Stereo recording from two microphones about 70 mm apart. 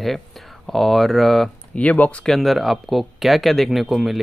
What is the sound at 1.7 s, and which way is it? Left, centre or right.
Speech, centre.